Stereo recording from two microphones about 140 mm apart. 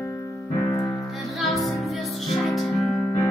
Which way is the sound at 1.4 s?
Centre (ahead or behind).